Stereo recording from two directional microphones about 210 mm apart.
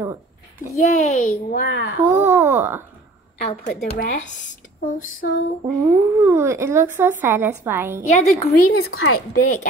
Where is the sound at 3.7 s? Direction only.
45° left (ahead or behind).